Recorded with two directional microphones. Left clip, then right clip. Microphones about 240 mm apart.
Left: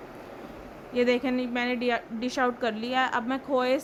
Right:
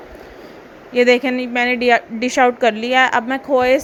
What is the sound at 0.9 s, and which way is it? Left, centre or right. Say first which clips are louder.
A woman's voice: right 11 dB; centre.